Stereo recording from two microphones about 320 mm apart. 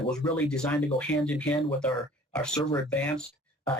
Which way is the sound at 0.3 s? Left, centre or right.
Centre.